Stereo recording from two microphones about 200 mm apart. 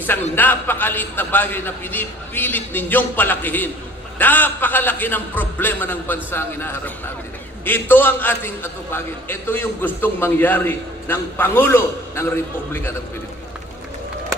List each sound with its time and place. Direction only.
0.4 s a man's voice: 10° left (ahead or behind)